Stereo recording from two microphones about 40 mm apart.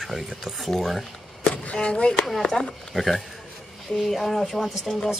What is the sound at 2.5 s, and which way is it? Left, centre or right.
Speech, centre.